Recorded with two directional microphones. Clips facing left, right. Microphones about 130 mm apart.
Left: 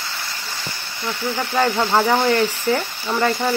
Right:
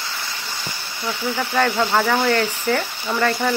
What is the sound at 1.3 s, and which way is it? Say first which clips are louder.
Speech: even; 15° left (ahead or behind).